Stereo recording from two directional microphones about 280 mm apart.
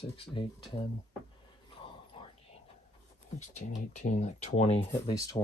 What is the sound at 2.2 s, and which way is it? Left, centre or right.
Whispering, centre.